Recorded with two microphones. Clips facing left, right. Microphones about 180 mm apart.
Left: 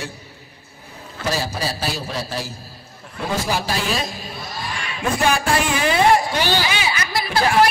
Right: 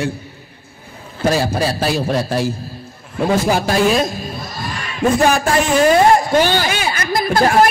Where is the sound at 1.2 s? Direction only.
55° right (ahead or behind).